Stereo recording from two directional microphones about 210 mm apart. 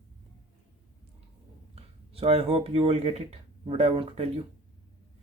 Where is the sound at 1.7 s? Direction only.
30° right (ahead or behind).